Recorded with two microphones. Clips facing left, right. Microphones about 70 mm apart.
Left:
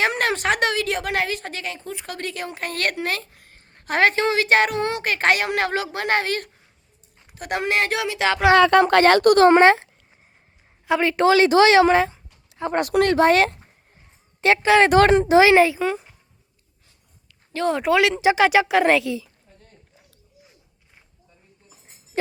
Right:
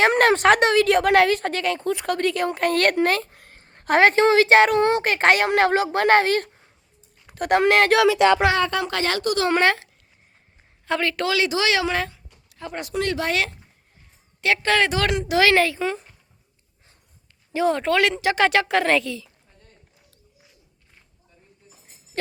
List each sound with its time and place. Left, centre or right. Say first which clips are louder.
0.0 s a child's voice: right 5 dB; right
7.3 s speech: right 7 dB; right
8.7 s speech: left 10 dB; left
9.5 s speech: left 6 dB; left
10.8 s a woman's voice: left 3 dB; centre
11.2 s speech: left 12 dB; left
11.9 s a sound: left 7 dB; left
12.7 s speech: left 8 dB; left
13.1 s speech: left 8 dB; left
14.4 s speech: left 5 dB; left
15.8 s speech: left 2 dB; centre
17.7 s a woman's voice: left 2 dB; centre